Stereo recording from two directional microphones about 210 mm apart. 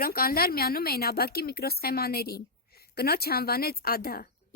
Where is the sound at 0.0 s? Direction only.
45° left (ahead or behind).